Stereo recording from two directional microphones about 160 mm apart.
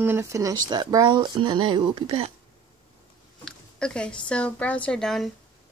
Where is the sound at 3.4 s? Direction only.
5° left (ahead or behind).